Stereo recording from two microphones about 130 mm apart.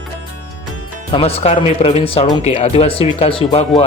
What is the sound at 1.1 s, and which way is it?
Speech, 50° left (ahead or behind).